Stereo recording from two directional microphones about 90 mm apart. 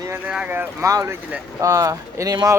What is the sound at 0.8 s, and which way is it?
Speech, 35° right (ahead or behind).